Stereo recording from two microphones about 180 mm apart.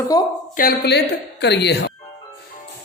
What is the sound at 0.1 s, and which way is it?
Speech, 20° left (ahead or behind).